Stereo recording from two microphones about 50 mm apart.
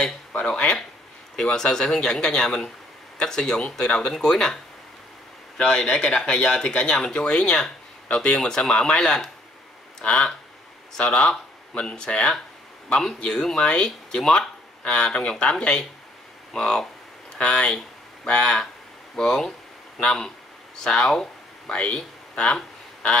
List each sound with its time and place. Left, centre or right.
0.3 s a sound: centre
1.3 s speech: centre
5.6 s speech: centre
14.9 s speech: left